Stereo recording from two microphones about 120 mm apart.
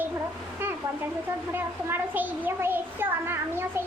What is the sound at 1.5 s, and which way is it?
A child's voice, 15° right (ahead or behind).